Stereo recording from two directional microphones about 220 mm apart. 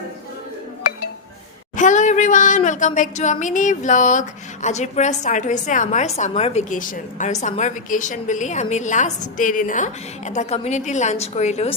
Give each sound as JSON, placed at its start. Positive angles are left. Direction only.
{"t": 1.7, "sound": "a woman's voice", "side_deg": 35}